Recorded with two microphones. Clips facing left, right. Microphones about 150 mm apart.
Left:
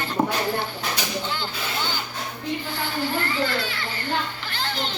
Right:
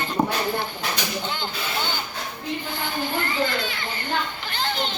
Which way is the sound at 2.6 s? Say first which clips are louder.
Even; 15° right (ahead or behind).